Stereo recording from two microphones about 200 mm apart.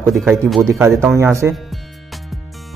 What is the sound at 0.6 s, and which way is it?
Speech, 15° right (ahead or behind).